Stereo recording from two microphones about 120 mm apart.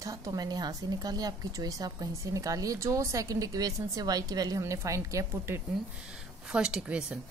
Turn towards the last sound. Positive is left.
turn(degrees=-10)  # may be behind; listen again after turning